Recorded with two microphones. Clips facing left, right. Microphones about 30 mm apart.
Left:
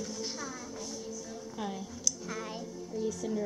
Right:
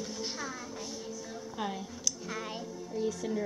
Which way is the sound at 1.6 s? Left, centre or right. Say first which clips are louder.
Right 1 dB; centre.